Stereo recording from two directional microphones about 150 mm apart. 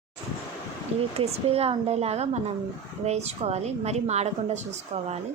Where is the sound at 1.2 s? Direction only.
40° right (ahead or behind).